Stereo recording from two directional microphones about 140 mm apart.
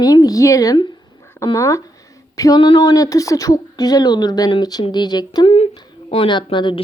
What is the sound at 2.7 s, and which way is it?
Speech, 25° left (ahead or behind).